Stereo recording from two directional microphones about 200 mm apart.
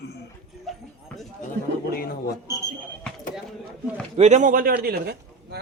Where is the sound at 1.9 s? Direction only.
50° left (ahead or behind).